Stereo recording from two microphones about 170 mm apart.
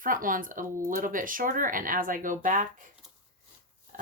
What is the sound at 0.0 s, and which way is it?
Speech, 55° right (ahead or behind).